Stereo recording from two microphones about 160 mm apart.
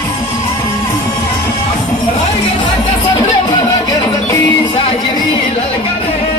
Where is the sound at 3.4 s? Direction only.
20° left (ahead or behind).